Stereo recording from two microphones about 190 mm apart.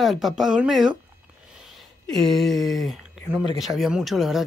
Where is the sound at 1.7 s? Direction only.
Centre (ahead or behind).